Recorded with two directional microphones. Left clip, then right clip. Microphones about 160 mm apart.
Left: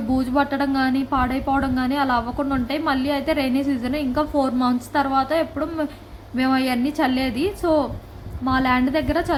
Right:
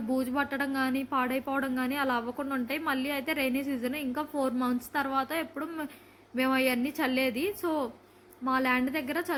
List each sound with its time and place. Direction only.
0.1 s a woman's voice: 15° right (ahead or behind)